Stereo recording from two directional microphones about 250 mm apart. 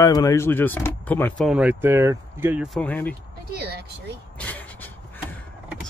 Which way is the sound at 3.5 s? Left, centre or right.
Right.